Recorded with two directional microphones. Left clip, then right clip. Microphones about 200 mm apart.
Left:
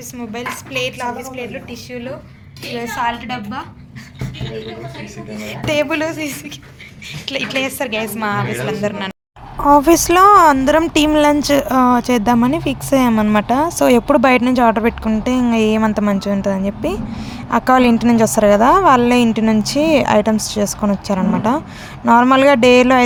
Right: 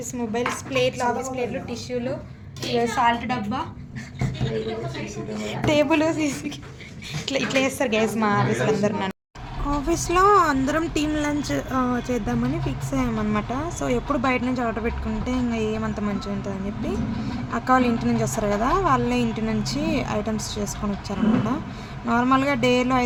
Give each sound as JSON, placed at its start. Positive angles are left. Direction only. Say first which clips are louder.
{"t": 0.2, "sound": "a woman's voice", "louder": "even", "side_deg": -5}
{"t": 5.4, "sound": "a woman's voice", "louder": "left 3 dB", "side_deg": -10}
{"t": 9.6, "sound": "speech", "louder": "left 15 dB", "side_deg": 50}